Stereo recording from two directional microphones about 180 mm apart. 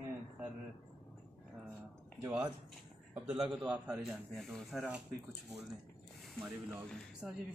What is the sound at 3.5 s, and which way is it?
Speech, 5° right (ahead or behind).